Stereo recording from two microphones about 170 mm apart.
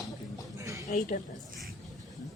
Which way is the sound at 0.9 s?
50° left (ahead or behind).